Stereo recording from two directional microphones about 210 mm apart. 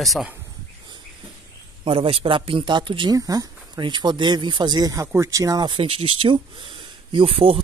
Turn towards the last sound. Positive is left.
turn(degrees=-25)  # may be behind; listen again after turning